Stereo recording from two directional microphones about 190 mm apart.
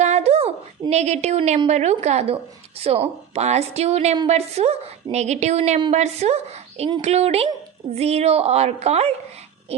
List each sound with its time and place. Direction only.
0.0 s a woman's voice: 35° right (ahead or behind)